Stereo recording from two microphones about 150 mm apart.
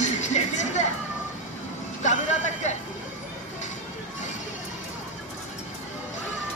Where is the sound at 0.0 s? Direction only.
50° left (ahead or behind).